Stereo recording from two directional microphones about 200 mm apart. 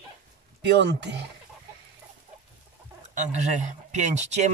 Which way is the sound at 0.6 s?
55° right (ahead or behind).